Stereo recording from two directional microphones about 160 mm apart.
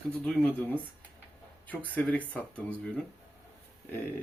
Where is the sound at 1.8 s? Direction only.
10° left (ahead or behind).